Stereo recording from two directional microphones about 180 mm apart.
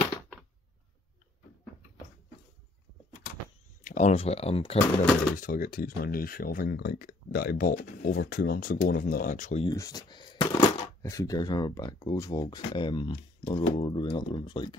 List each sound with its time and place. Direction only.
3.8 s speech: 45° left (ahead or behind)
5.3 s speech: 50° left (ahead or behind)
9.7 s speech: 20° left (ahead or behind)